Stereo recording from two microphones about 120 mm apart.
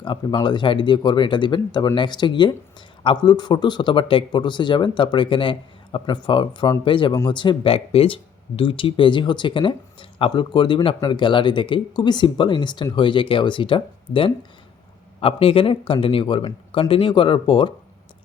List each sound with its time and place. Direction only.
0.0 s speech: 40° left (ahead or behind)